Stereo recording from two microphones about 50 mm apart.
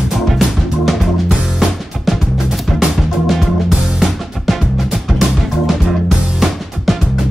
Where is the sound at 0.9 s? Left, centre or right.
Centre.